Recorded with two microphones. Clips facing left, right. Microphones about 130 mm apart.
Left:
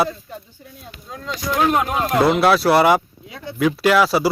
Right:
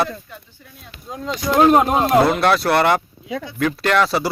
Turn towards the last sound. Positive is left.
turn(degrees=5)  # may be behind; listen again after turning